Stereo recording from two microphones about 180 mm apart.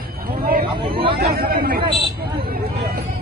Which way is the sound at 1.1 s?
60° right (ahead or behind).